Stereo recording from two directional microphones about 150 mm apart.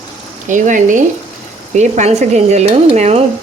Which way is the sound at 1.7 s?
50° right (ahead or behind).